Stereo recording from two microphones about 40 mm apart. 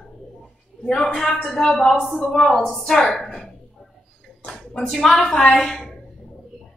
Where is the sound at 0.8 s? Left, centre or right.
Centre.